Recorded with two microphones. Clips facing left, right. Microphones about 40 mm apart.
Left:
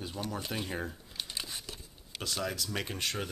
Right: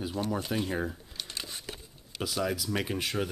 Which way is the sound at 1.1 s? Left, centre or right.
Centre.